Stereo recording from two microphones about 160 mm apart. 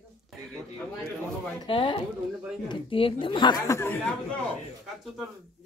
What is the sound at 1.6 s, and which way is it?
A woman's voice, 30° left (ahead or behind).